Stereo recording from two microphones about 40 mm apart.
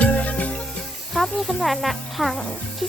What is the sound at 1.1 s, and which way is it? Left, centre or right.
Speech, centre.